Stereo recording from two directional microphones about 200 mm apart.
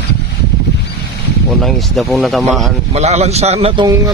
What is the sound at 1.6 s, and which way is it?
Speech, centre (ahead or behind).